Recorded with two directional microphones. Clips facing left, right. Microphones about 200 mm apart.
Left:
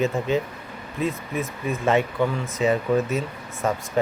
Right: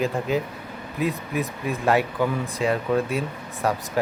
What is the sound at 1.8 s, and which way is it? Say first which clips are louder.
Speech: even; centre (ahead or behind).